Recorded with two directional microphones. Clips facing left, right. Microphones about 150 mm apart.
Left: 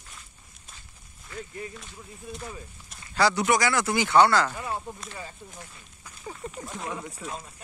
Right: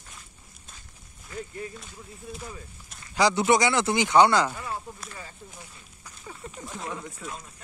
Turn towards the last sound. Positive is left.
turn(degrees=15)  # may be behind; listen again after turning